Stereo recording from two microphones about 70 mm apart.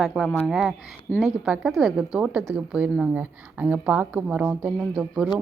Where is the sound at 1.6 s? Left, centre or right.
Centre.